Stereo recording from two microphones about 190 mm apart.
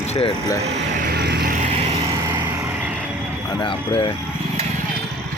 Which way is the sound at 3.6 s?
30° left (ahead or behind).